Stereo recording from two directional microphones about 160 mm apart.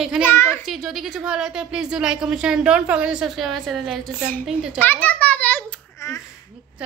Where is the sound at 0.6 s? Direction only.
Centre (ahead or behind).